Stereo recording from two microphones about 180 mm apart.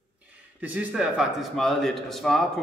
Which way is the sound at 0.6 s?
10° right (ahead or behind).